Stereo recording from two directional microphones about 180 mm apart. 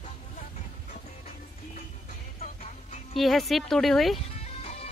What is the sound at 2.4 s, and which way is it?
Music, 35° left (ahead or behind).